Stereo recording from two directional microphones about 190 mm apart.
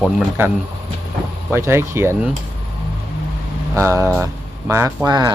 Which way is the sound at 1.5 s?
15° right (ahead or behind).